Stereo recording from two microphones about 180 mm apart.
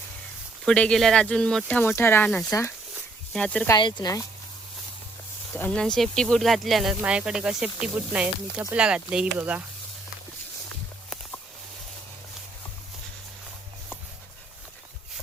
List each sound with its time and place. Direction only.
0.6 s speech: 5° left (ahead or behind)
2.5 s speech: 15° left (ahead or behind)
3.3 s speech: 5° left (ahead or behind)
3.7 s speech: 25° left (ahead or behind)
5.5 s speech: 10° left (ahead or behind); by 9.6 s 10° right (ahead or behind)